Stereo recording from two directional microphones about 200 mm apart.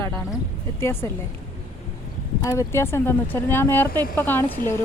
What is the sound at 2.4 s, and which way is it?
Speech, 15° left (ahead or behind).